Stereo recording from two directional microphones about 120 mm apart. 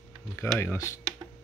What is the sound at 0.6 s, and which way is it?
Speech, 25° left (ahead or behind).